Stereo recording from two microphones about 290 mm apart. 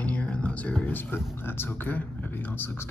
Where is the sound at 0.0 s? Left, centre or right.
Centre.